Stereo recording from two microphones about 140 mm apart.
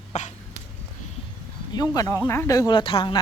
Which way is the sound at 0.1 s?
55° left (ahead or behind).